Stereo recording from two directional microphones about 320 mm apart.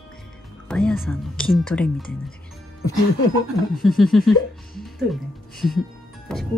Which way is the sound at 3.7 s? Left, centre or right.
Centre.